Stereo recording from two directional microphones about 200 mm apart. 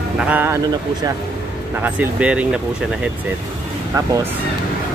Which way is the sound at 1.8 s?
10° right (ahead or behind).